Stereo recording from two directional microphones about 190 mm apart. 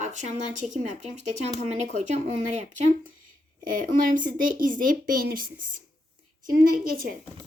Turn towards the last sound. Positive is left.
turn(degrees=-50)  # may be behind; listen again after turning